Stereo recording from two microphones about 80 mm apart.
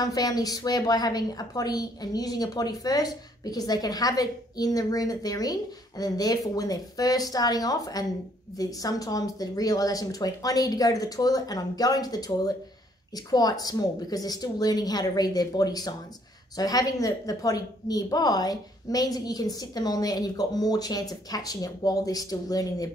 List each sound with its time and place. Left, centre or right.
0.0 s a woman's voice: left